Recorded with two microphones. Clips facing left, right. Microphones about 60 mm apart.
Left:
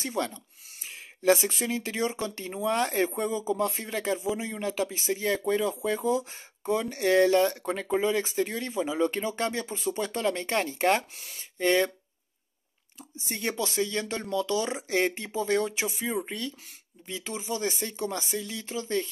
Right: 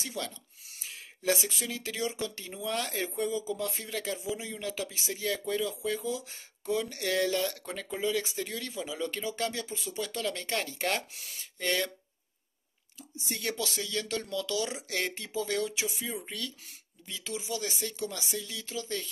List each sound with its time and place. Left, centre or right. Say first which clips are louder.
0.0 s speech: left 7 dB; left
13.3 s speech: left 3 dB; left